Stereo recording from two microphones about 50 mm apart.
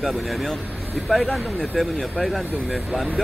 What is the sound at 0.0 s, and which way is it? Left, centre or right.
Speech, centre.